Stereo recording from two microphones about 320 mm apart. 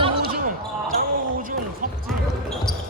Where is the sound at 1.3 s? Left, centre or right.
Right.